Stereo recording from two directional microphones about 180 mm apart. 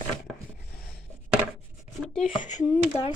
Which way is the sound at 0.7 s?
55° left (ahead or behind).